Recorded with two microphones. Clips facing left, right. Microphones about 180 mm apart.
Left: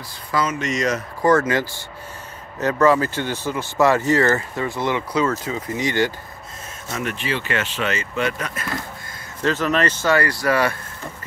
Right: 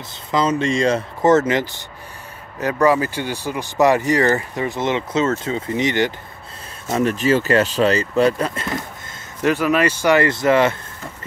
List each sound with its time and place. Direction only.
0.3 s speech: 25° right (ahead or behind)
6.9 s speech: 35° right (ahead or behind)
9.4 s speech: 10° right (ahead or behind)